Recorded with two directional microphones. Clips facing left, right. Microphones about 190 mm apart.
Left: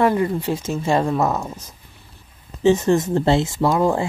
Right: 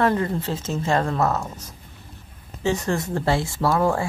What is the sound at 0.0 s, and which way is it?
A woman's voice, 15° left (ahead or behind).